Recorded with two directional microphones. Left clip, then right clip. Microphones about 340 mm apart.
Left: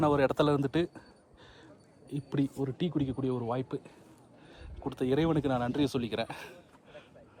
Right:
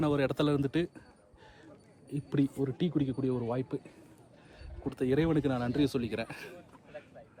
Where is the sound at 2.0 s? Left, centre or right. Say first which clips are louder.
Right 1 dB; centre.